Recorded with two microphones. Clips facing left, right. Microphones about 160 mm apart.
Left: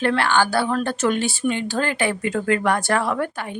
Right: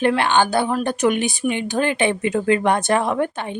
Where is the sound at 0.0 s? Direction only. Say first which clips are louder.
Right 2 dB; 20° right (ahead or behind).